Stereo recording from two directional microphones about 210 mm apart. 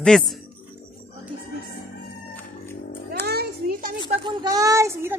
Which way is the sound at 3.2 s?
50° right (ahead or behind).